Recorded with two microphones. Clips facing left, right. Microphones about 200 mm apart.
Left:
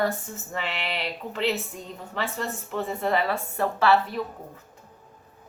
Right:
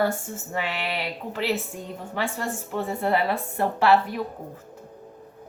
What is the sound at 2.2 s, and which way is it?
A woman's voice, 10° right (ahead or behind).